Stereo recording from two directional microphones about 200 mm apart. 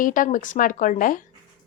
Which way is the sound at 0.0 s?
40° left (ahead or behind).